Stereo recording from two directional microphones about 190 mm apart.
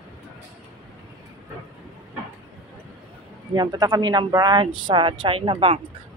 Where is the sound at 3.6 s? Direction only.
20° right (ahead or behind).